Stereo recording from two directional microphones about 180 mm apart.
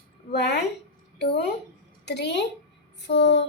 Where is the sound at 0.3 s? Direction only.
70° left (ahead or behind).